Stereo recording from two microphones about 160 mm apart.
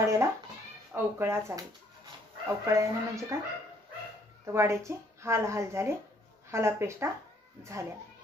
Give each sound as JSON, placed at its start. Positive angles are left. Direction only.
{"t": 0.0, "sound": "speech", "side_deg": -20}
{"t": 4.5, "sound": "speech", "side_deg": -15}